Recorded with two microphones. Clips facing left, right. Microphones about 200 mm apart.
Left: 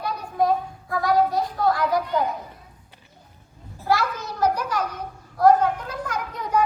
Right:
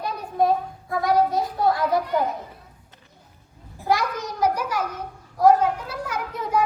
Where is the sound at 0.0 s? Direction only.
25° right (ahead or behind).